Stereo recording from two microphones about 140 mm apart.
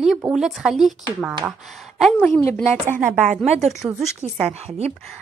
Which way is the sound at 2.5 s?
15° left (ahead or behind).